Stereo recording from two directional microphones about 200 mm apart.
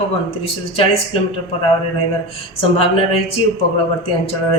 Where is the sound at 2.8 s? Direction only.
25° left (ahead or behind).